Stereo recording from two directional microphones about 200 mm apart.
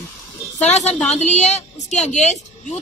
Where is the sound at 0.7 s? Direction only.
35° left (ahead or behind).